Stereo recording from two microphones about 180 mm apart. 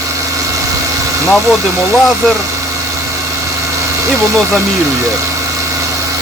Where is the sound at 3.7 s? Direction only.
15° right (ahead or behind).